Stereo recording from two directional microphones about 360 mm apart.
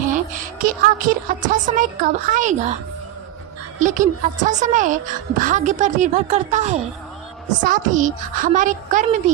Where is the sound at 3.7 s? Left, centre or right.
Right.